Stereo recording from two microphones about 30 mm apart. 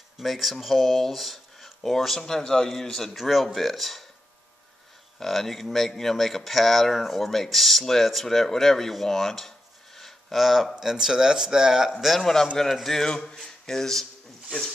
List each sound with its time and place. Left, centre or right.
0.2 s speech: centre
3.2 s speech: centre
5.2 s speech: centre
9.9 s a sound: centre
10.4 s speech: centre
10.8 s speech: centre
12.2 s speech: centre
13.0 s speech: left